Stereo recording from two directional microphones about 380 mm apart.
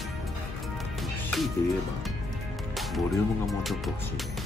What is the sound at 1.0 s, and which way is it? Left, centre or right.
Music, centre.